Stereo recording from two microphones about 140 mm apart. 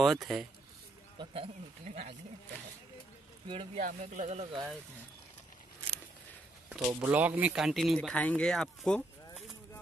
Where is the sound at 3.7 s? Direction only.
65° right (ahead or behind).